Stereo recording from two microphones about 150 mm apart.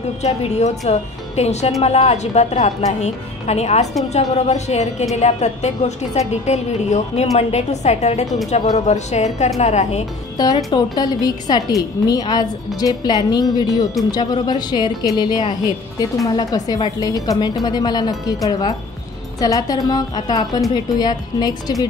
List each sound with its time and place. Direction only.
0.2 s a woman's voice: 45° left (ahead or behind)
10.3 s a woman's voice: 25° left (ahead or behind)